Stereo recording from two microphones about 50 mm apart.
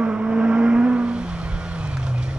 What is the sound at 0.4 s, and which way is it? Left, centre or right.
Vehicle, right.